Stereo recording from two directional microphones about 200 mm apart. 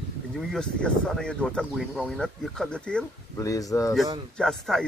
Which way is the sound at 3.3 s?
15° left (ahead or behind).